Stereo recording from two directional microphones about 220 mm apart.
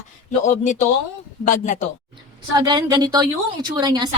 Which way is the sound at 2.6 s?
20° right (ahead or behind).